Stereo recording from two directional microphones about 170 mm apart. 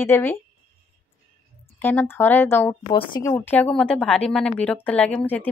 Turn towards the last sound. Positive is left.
turn(degrees=10)  # may be behind; listen again after turning